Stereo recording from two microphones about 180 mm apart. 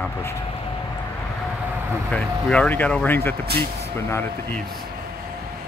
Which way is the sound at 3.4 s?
60° right (ahead or behind).